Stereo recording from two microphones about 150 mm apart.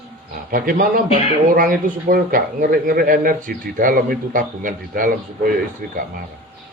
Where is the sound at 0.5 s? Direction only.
70° right (ahead or behind).